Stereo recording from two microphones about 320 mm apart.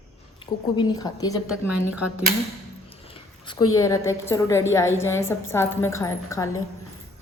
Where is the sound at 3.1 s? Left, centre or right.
Centre.